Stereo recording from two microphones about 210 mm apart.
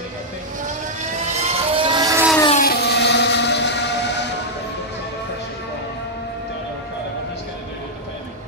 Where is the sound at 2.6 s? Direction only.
50° left (ahead or behind).